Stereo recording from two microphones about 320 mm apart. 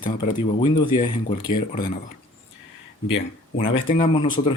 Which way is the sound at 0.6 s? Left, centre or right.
Centre.